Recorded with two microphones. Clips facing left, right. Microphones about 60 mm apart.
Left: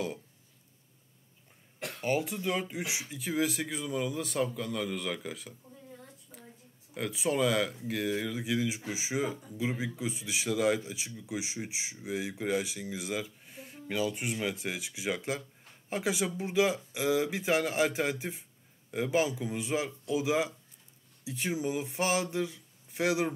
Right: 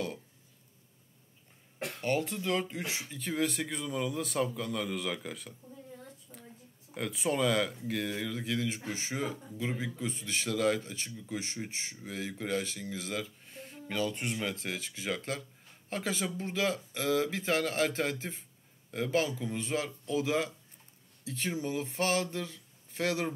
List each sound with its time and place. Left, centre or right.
2.0 s speech: centre
6.3 s a sound: centre
6.9 s speech: centre